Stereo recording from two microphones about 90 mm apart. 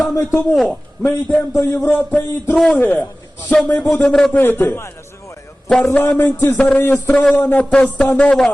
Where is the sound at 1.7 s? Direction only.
20° left (ahead or behind).